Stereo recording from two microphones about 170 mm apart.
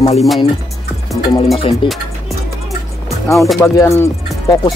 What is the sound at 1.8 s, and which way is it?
Speech, 30° left (ahead or behind).